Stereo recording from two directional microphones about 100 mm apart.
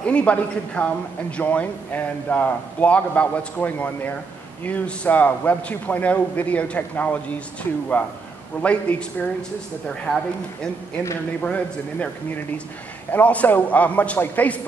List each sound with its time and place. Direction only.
0.0 s a man's voice: 10° left (ahead or behind)
10.1 s speech: 5° left (ahead or behind)
11.4 s a man's voice: 15° left (ahead or behind)